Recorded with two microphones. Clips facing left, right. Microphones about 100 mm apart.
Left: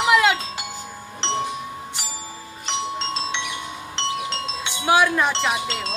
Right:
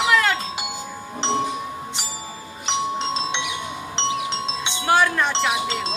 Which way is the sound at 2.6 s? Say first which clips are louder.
Right 3 dB; 20° right (ahead or behind).